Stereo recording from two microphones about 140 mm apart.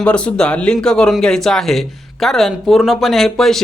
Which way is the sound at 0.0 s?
5° left (ahead or behind).